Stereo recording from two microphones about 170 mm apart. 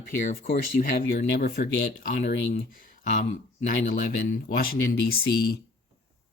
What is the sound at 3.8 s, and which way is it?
Speech, 50° left (ahead or behind).